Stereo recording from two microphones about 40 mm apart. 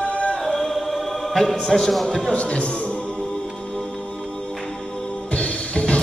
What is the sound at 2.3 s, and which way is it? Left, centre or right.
Speech, left.